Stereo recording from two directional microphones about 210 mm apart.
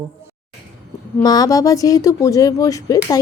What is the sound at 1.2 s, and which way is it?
Speech, 20° left (ahead or behind).